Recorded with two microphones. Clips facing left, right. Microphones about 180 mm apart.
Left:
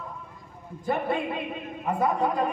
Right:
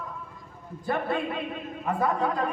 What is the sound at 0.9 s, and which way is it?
A man's voice, 15° left (ahead or behind).